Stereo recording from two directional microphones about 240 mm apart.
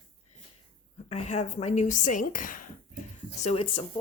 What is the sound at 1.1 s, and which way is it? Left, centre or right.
A woman's voice, left.